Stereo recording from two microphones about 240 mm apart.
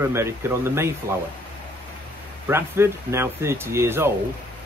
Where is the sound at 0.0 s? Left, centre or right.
Centre.